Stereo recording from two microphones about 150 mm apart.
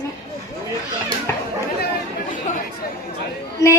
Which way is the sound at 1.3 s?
15° left (ahead or behind).